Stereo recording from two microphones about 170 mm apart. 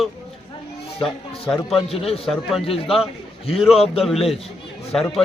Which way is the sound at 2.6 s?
35° left (ahead or behind).